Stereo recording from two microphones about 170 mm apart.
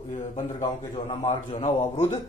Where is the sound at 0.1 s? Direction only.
40° left (ahead or behind).